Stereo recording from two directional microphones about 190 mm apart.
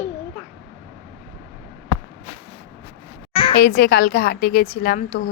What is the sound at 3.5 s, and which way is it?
Speech, 55° left (ahead or behind).